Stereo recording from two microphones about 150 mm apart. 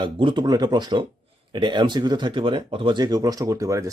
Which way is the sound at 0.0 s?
35° right (ahead or behind).